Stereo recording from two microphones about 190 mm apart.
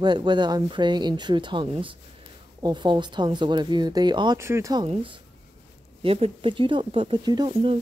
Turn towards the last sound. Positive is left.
turn(degrees=-30)  # may be behind; listen again after turning